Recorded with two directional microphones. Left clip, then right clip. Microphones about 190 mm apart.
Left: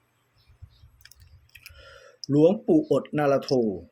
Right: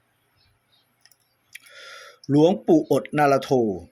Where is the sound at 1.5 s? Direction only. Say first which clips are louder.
Right 6 dB; 10° right (ahead or behind).